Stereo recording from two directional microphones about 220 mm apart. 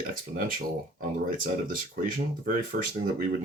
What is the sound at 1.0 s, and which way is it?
Speech, 40° right (ahead or behind).